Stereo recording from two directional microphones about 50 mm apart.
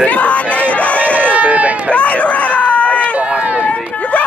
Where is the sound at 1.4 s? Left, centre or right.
Right.